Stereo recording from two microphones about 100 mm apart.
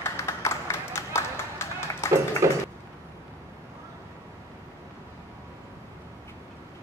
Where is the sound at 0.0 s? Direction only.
25° left (ahead or behind).